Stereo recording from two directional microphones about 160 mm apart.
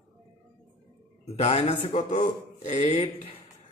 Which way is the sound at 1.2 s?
40° left (ahead or behind).